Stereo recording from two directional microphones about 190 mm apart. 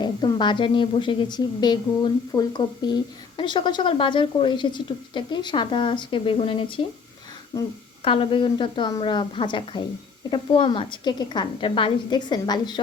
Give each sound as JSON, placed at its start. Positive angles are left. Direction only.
{"t": 0.0, "sound": "a woman's voice", "side_deg": 25}
{"t": 8.0, "sound": "a woman's voice", "side_deg": 30}